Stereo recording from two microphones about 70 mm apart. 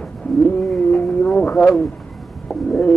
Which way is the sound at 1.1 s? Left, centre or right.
Centre.